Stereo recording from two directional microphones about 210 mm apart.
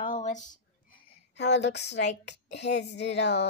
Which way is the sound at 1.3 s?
55° left (ahead or behind).